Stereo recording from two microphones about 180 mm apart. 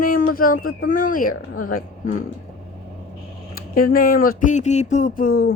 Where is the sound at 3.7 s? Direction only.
55° left (ahead or behind).